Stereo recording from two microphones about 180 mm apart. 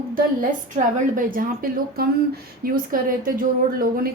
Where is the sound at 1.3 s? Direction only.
55° right (ahead or behind).